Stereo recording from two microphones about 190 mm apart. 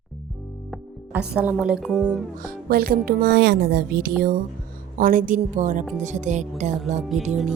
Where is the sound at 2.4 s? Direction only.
50° right (ahead or behind).